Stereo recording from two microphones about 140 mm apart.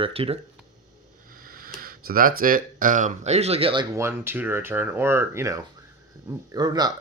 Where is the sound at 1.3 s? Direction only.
90° right; by 3.8 s 40° right (ahead or behind).